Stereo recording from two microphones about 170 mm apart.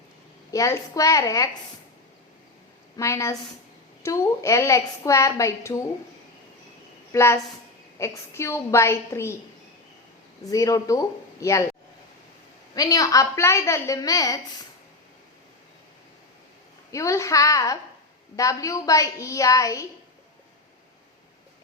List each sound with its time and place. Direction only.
0.5 s a woman's voice: 20° left (ahead or behind)
3.0 s a woman's voice: 15° left (ahead or behind)
7.1 s a woman's voice: 15° left (ahead or behind)
10.5 s a woman's voice: 20° left (ahead or behind)
12.7 s a woman's voice: 20° left (ahead or behind)
16.9 s a woman's voice: 20° left (ahead or behind)